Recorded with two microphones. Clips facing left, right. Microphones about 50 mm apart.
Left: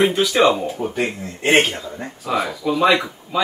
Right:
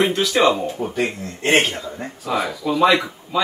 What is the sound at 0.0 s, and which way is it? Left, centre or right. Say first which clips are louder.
Speech: left 1 dB; centre.